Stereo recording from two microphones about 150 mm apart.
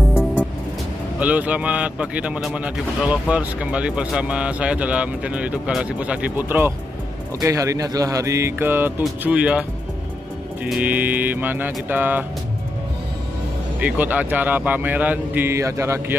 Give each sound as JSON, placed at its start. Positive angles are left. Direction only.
{"t": 1.2, "sound": "speech", "side_deg": -10}
{"t": 13.7, "sound": "speech", "side_deg": -10}